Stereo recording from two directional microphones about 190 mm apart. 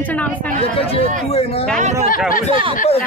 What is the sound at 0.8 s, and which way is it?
Speech, 30° left (ahead or behind).